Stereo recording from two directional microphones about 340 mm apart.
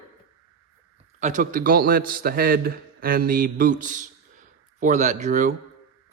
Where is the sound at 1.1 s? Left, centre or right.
Right.